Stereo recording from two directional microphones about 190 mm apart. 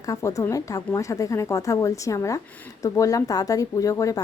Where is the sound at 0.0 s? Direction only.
15° left (ahead or behind).